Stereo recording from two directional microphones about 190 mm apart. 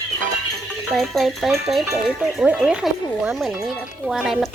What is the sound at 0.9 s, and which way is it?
Speech, centre (ahead or behind).